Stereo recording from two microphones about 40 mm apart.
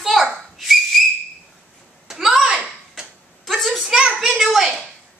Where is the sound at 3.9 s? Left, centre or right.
Right.